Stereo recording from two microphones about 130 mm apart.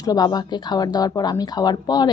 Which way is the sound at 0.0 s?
30° left (ahead or behind).